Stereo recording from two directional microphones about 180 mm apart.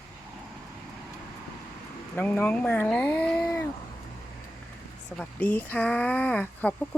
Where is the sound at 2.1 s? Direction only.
10° left (ahead or behind).